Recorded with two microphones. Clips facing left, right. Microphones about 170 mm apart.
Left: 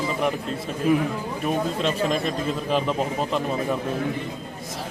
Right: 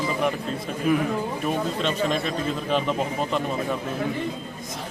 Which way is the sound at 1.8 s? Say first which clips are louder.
Left 1 dB; centre (ahead or behind).